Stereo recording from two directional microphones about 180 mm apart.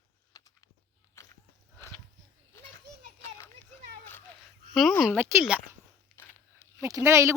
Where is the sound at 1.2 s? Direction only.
15° left (ahead or behind).